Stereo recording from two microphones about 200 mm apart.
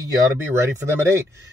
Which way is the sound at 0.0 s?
15° right (ahead or behind).